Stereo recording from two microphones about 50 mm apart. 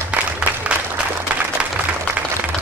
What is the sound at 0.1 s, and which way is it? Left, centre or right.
Applause, right.